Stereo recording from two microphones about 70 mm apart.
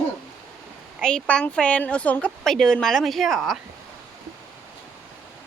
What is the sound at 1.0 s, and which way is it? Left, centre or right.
Speech, centre.